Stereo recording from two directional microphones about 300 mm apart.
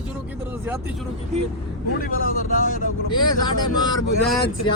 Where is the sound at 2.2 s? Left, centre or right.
Left.